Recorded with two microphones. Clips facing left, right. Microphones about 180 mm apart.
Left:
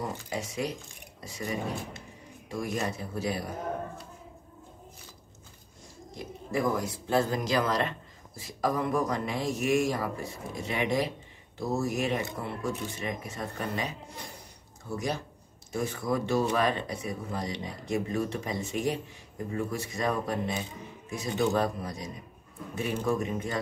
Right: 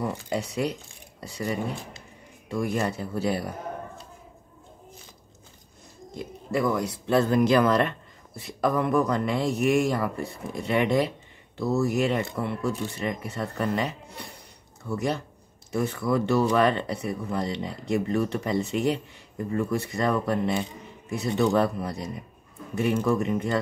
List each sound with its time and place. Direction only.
0.3 s speech: 65° right (ahead or behind)
2.6 s speech: 65° right (ahead or behind)
6.1 s speech: 70° right (ahead or behind)